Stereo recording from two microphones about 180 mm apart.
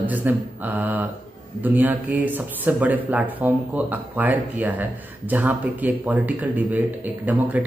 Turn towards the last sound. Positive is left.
turn(degrees=-10)  # may be behind; listen again after turning